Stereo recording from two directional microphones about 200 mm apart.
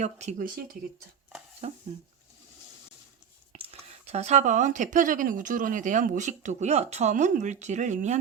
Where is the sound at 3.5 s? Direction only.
30° right (ahead or behind).